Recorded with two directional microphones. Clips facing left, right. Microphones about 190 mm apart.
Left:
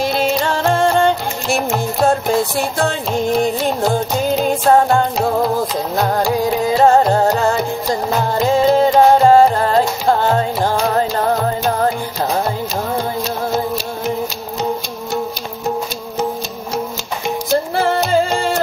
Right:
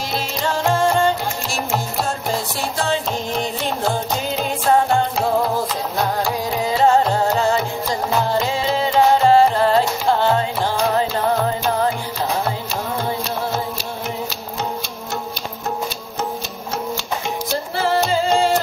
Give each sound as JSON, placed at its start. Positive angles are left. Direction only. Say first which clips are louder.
{"t": 0.0, "sound": "music", "louder": "left 7 dB", "side_deg": 60}
{"t": 6.7, "sound": "music", "louder": "left 3 dB", "side_deg": 45}
{"t": 17.5, "sound": "music", "louder": "left 5 dB", "side_deg": 55}